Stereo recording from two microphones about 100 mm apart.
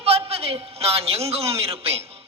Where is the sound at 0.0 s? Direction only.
90° right.